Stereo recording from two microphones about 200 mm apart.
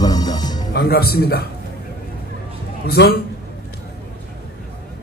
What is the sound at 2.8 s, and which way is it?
Speech, 55° left (ahead or behind).